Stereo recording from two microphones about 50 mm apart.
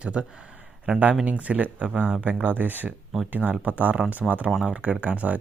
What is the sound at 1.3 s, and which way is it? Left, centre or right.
Speech, right.